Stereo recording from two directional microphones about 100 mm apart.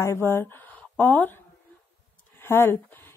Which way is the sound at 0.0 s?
30° left (ahead or behind).